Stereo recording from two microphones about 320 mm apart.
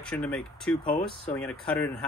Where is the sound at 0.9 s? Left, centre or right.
Centre.